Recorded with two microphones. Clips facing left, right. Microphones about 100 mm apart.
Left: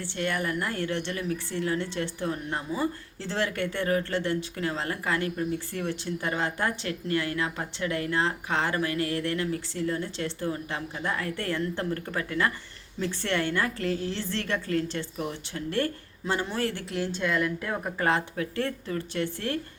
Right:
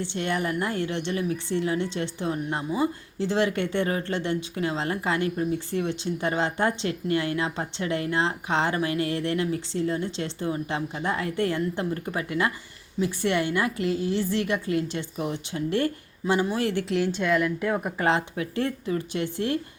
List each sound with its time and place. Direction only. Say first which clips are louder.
0.0 s a woman's voice: right 2 dB; 20° right (ahead or behind)